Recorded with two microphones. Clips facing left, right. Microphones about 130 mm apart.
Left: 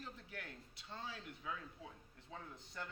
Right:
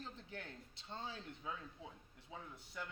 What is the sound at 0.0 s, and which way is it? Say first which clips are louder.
Speech: right 1 dB; 25° right (ahead or behind).